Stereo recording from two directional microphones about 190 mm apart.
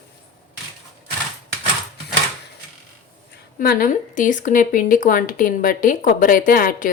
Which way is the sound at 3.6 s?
50° left (ahead or behind).